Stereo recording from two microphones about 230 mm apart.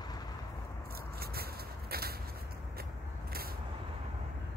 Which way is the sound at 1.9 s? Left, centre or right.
Right.